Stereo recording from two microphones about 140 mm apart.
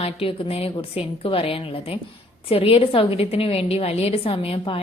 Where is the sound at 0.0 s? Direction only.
40° left (ahead or behind).